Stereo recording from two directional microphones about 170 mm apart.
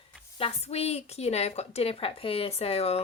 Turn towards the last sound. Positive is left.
turn(degrees=35)  # may be behind; listen again after turning